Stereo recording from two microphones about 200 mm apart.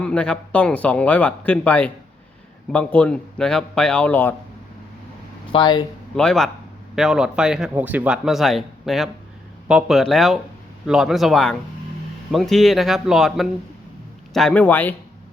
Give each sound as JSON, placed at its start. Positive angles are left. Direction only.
{"t": 0.0, "sound": "speech", "side_deg": 5}
{"t": 5.5, "sound": "speech", "side_deg": 25}
{"t": 6.1, "sound": "speech", "side_deg": 5}